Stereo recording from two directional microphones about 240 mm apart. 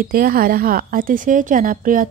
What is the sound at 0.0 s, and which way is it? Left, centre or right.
A woman's voice, right.